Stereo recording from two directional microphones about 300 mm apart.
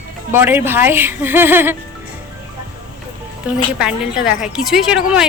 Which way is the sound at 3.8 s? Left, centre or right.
Centre.